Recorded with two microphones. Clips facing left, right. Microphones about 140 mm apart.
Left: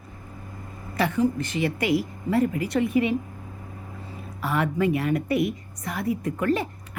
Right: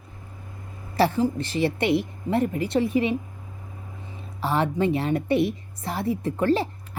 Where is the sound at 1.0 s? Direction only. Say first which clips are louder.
Right 1 dB; 30° right (ahead or behind).